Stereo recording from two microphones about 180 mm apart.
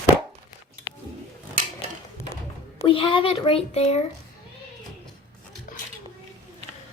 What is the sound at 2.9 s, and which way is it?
Speech, 30° left (ahead or behind).